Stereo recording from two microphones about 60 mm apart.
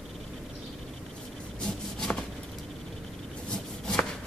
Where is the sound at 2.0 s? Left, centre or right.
Centre.